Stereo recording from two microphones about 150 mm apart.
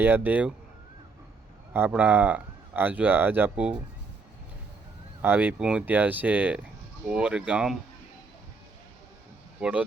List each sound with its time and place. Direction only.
0.0 s speech: 15° right (ahead or behind)
1.7 s speech: 10° right (ahead or behind)
5.2 s speech: 10° right (ahead or behind)
9.6 s speech: 10° right (ahead or behind)